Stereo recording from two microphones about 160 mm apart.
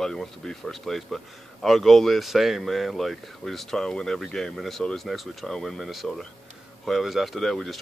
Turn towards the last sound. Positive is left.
turn(degrees=0)  # may be behind; listen again after turning